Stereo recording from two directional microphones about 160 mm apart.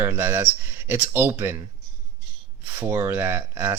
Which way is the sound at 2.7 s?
15° right (ahead or behind).